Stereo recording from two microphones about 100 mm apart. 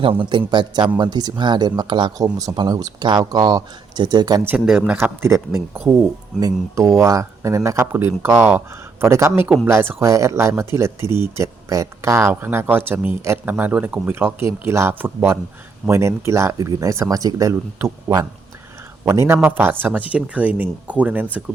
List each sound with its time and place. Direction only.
0.0 s speech: 60° right (ahead or behind); by 4.4 s 45° right (ahead or behind)
4.6 s speech: 5° right (ahead or behind)
4.9 s speech: 25° right (ahead or behind)